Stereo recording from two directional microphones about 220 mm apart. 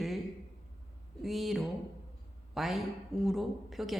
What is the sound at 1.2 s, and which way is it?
A man's voice, centre (ahead or behind).